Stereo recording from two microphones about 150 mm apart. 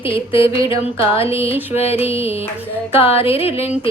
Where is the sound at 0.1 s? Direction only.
35° left (ahead or behind).